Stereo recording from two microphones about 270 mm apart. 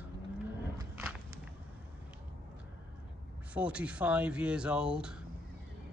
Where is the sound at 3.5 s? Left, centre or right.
Centre.